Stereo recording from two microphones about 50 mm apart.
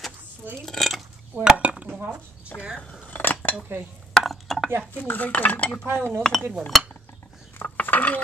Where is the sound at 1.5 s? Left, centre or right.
Right.